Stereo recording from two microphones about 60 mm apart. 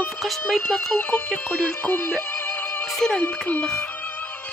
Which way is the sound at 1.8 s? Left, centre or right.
Left.